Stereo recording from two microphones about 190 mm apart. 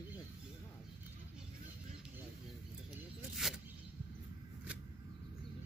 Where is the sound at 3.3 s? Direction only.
Centre (ahead or behind).